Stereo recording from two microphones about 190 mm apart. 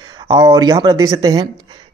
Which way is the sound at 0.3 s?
20° right (ahead or behind).